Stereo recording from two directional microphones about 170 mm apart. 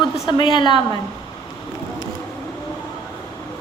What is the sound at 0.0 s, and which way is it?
Speech, 25° left (ahead or behind).